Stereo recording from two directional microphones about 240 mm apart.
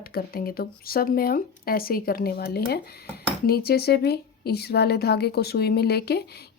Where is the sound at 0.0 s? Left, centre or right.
Left.